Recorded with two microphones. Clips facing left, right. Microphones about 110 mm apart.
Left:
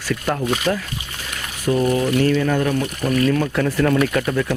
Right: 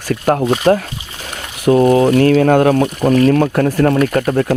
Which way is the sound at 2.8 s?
30° right (ahead or behind).